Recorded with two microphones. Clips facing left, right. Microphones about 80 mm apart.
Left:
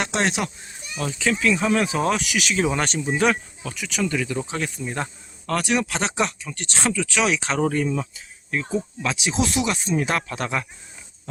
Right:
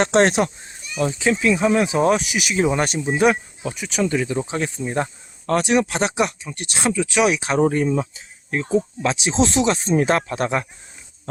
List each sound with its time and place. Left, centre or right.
0.0 s speech: right
0.9 s speech: right